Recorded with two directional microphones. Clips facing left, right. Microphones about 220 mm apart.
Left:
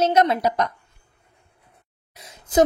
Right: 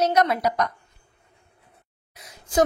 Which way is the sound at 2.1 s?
25° left (ahead or behind).